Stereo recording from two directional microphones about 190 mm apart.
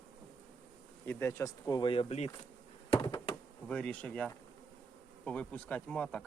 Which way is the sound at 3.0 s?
25° left (ahead or behind).